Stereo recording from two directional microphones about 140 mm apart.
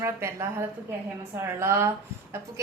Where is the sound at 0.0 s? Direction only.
20° right (ahead or behind).